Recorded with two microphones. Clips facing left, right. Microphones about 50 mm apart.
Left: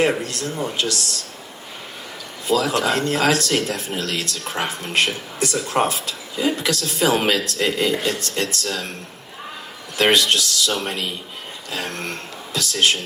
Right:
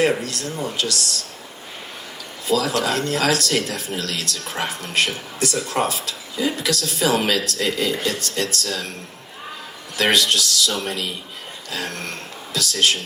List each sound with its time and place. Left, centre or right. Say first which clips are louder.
0.0 s speech: even; left
2.5 s speech: left 1 dB; left
10.0 s speech: left 1 dB; left